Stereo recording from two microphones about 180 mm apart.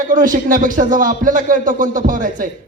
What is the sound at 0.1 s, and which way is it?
Speech, 45° right (ahead or behind).